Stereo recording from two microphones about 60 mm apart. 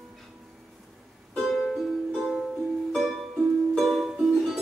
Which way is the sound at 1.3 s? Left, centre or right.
Centre.